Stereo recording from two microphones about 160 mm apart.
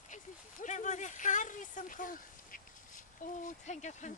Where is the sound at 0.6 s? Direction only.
50° left (ahead or behind).